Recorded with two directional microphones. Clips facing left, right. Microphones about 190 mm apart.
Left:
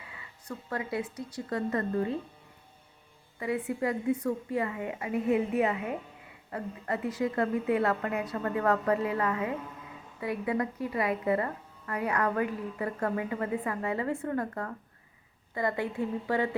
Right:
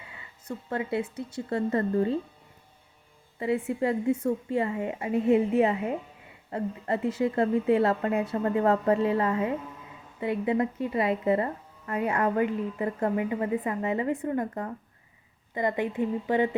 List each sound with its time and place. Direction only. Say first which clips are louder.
0.0 s speech: right 1 dB; 25° right (ahead or behind)
3.3 s speech: right 4 dB; 25° right (ahead or behind)